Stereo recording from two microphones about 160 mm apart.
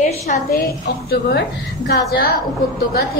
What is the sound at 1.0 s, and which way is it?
A woman's voice, 75° left (ahead or behind).